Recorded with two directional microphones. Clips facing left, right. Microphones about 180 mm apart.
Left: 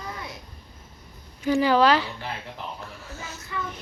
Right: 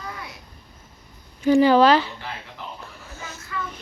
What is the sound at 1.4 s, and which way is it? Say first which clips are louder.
Speech: right 5 dB; 30° right (ahead or behind).